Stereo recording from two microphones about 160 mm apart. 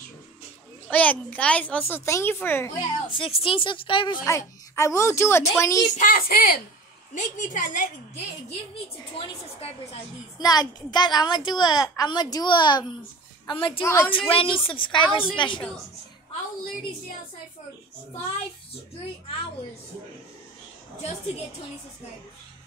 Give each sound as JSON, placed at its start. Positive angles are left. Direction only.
{"t": 0.8, "sound": "a child's voice", "side_deg": 10}
{"t": 3.1, "sound": "a woman's voice", "side_deg": 35}
{"t": 4.2, "sound": "a child's voice", "side_deg": 20}
{"t": 5.9, "sound": "a child's voice", "side_deg": 60}
{"t": 7.2, "sound": "a child's voice", "side_deg": 55}
{"t": 9.1, "sound": "a woman's voice", "side_deg": 35}
{"t": 10.4, "sound": "a woman's voice", "side_deg": 25}
{"t": 13.8, "sound": "a child's voice", "side_deg": 15}
{"t": 14.3, "sound": "a woman's voice", "side_deg": 35}